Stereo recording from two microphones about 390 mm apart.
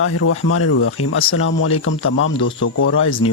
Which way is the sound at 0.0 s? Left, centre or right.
Left.